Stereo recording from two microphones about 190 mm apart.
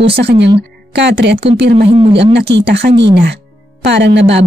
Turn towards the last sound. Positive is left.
turn(degrees=-65)  # may be behind; listen again after turning